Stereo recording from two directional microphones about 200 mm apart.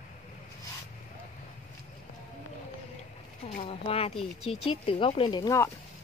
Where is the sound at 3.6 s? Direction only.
30° left (ahead or behind).